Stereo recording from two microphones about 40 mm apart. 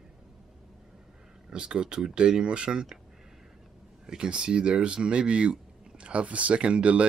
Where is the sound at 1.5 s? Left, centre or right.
Right.